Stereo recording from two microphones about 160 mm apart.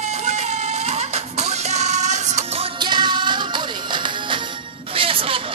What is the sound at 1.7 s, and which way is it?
Music, 45° right (ahead or behind).